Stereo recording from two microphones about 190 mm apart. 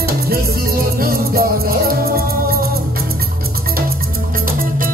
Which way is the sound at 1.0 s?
50° right (ahead or behind).